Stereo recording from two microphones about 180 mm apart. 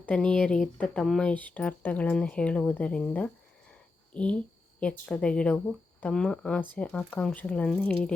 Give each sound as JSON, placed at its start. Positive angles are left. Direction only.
{"t": 0.0, "sound": "speech", "side_deg": 5}